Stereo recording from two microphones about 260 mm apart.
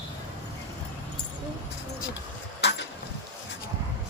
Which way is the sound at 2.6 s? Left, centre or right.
Left.